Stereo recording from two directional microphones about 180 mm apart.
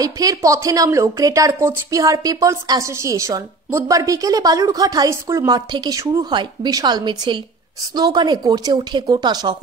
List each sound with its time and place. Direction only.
0.0 s speech: 20° right (ahead or behind)